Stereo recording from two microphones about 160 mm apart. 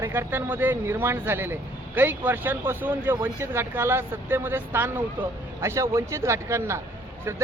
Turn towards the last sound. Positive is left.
turn(degrees=-15)  # may be behind; listen again after turning